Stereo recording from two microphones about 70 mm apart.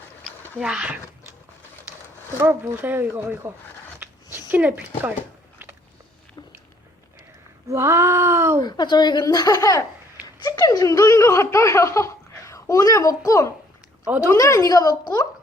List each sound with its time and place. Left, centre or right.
0.6 s speech: centre
2.4 s speech: right
4.0 s a sound: right
7.7 s speech: right
8.6 s a woman's voice: left
9.2 s speech: left